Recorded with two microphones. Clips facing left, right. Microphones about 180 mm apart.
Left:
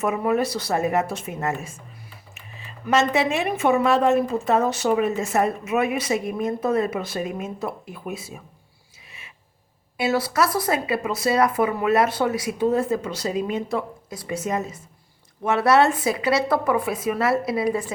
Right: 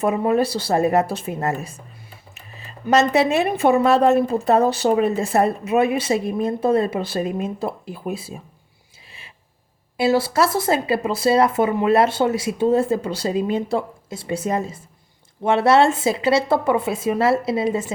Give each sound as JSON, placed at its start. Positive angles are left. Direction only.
{"t": 0.0, "sound": "speech", "side_deg": -30}
{"t": 10.0, "sound": "speech", "side_deg": -30}